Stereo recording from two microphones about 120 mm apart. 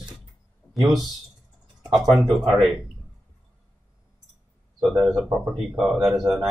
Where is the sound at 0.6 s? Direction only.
20° left (ahead or behind).